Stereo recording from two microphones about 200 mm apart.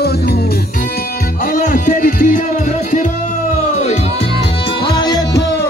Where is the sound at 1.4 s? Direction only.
40° left (ahead or behind).